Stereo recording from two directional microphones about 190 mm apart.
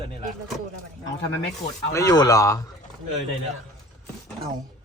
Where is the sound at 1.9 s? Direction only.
20° left (ahead or behind).